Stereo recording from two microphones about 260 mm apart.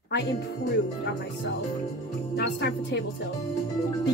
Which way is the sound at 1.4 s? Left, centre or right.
Left.